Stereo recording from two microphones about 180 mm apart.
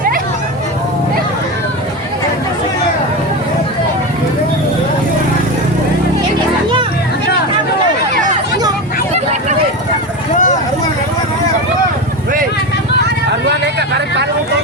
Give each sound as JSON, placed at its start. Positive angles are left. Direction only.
{"t": 10.3, "sound": "vehicle", "side_deg": 45}
{"t": 13.5, "sound": "vehicle", "side_deg": -70}